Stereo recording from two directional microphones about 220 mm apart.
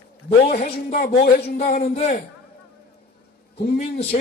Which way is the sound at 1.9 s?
30° left (ahead or behind).